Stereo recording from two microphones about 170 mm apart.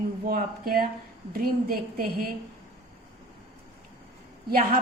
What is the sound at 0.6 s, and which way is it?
A woman's voice, 60° right (ahead or behind).